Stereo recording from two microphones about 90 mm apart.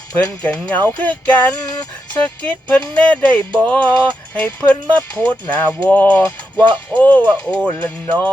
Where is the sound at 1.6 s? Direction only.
45° left (ahead or behind).